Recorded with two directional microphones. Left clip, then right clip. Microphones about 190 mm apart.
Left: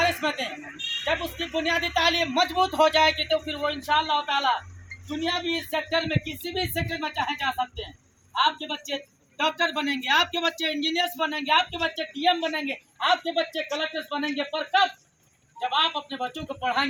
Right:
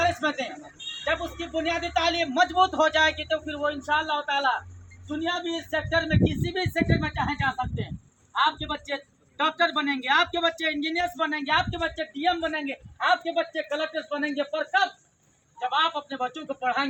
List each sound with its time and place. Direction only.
0.0 s a sound: 5° left (ahead or behind)
1.4 s speech: 5° left (ahead or behind)
5.3 s speech: 25° right (ahead or behind)
5.7 s a man's voice: 5° left (ahead or behind)